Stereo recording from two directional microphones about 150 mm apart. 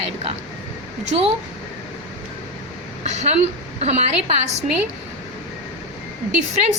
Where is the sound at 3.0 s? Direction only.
50° right (ahead or behind).